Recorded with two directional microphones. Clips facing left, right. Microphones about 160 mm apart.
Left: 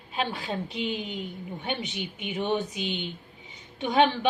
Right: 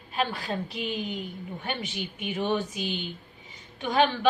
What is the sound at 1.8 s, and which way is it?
Speech, 20° left (ahead or behind).